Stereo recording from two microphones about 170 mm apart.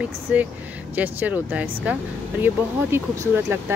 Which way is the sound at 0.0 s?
10° right (ahead or behind).